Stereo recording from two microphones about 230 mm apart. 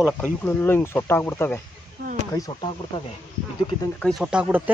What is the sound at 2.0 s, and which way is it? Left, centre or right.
Speech, right.